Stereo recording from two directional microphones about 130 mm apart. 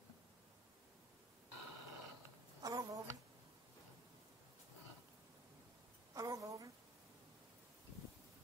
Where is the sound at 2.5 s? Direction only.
30° right (ahead or behind).